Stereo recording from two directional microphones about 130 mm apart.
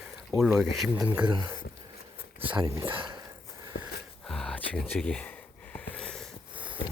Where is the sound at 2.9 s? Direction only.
40° right (ahead or behind).